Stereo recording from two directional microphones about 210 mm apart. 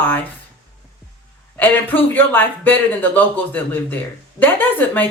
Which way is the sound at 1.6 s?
10° left (ahead or behind).